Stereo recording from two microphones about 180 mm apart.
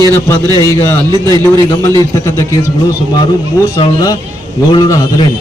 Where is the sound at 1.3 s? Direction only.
15° left (ahead or behind).